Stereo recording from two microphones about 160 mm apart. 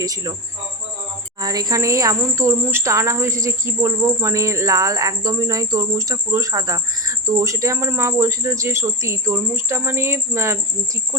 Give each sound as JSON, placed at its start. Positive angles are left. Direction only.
{"t": 0.0, "sound": "speech", "side_deg": -25}
{"t": 1.4, "sound": "speech", "side_deg": -25}